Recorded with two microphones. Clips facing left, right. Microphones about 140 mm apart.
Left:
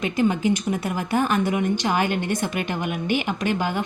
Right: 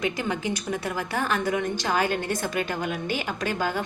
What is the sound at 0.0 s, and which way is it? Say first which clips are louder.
A woman's voice: left 6 dB; 20° left (ahead or behind).